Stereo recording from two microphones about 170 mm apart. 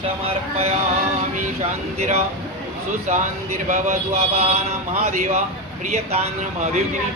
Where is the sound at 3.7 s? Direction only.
40° right (ahead or behind).